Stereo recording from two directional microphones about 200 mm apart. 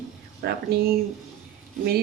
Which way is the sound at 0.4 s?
50° right (ahead or behind).